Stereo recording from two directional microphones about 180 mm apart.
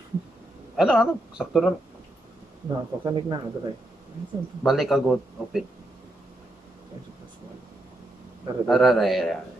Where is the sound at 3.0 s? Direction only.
25° right (ahead or behind).